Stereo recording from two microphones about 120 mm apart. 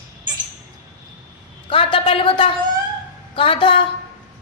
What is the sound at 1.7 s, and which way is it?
A woman's voice, 45° left (ahead or behind).